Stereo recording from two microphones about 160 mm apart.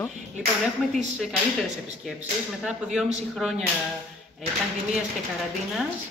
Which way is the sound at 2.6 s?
5° right (ahead or behind).